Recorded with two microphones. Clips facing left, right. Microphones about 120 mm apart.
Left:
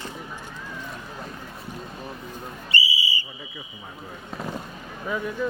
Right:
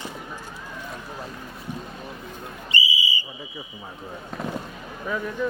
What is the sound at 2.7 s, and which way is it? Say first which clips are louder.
Whistle: right 1 dB; 15° right (ahead or behind).